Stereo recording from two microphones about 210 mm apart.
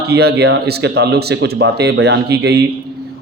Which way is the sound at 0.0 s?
50° right (ahead or behind).